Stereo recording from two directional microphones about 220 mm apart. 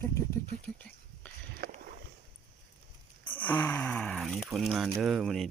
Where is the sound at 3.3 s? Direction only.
10° left (ahead or behind).